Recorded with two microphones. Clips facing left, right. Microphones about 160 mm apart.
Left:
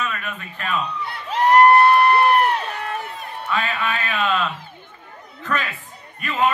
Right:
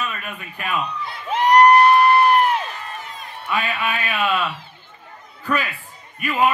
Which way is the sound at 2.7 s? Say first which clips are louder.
Left 5 dB; 65° left (ahead or behind).